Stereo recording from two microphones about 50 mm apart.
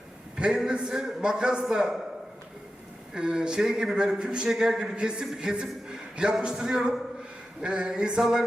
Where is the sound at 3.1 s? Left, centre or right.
Centre.